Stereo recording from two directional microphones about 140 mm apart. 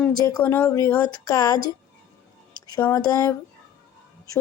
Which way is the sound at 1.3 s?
25° left (ahead or behind).